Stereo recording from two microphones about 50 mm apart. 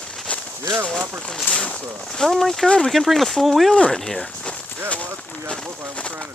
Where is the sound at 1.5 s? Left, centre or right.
Left.